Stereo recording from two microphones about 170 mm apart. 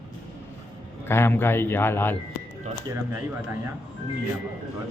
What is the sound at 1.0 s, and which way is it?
A man's voice, 15° left (ahead or behind).